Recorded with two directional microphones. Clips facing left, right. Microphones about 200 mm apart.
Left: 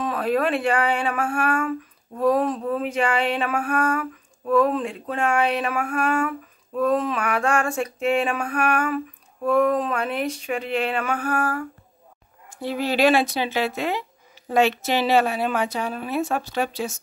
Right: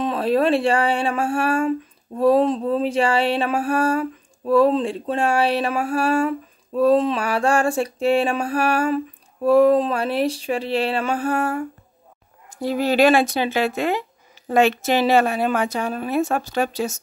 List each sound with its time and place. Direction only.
0.0 s speech: 25° right (ahead or behind)
12.4 s speech: 40° right (ahead or behind)